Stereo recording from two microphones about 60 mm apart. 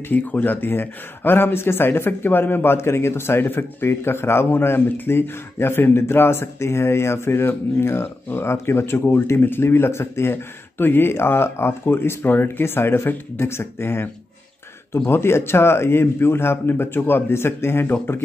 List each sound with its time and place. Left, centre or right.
0.1 s speech: left